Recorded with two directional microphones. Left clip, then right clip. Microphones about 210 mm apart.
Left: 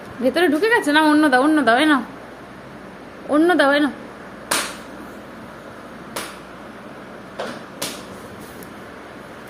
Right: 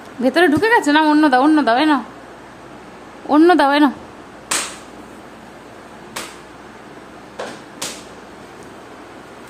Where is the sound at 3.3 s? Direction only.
20° right (ahead or behind).